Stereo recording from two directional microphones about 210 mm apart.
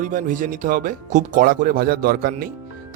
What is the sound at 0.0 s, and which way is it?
Speech, 40° right (ahead or behind).